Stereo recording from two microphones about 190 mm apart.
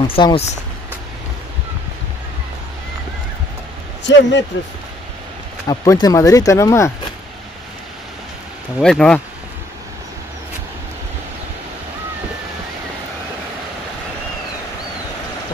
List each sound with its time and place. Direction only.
0.0 s speech: 30° left (ahead or behind)
4.0 s a man's voice: 70° left (ahead or behind)
5.7 s speech: 20° left (ahead or behind)
8.8 s speech: 5° left (ahead or behind)